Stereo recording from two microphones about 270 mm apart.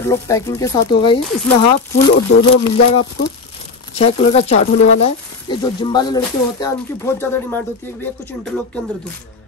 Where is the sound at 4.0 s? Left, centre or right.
Left.